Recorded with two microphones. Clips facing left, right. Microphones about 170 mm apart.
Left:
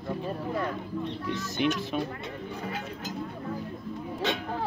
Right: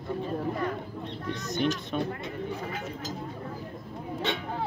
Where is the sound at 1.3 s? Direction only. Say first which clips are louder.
Even; 35° right (ahead or behind).